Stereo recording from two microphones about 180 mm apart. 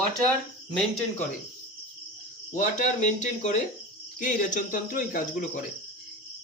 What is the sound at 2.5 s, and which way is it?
A man's voice, 45° left (ahead or behind).